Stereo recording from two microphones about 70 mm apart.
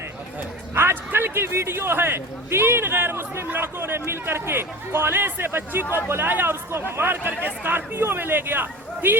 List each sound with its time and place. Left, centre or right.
0.7 s a man's voice: right